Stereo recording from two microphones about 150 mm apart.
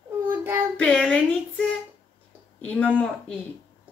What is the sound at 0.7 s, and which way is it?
Speech, 5° left (ahead or behind).